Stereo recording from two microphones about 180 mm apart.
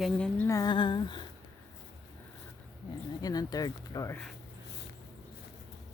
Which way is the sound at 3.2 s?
20° left (ahead or behind).